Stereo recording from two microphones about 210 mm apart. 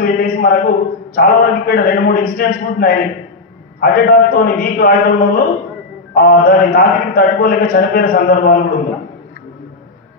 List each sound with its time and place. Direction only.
0.0 s a man's voice: 45° left (ahead or behind)